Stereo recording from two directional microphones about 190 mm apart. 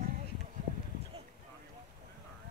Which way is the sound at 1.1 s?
30° right (ahead or behind).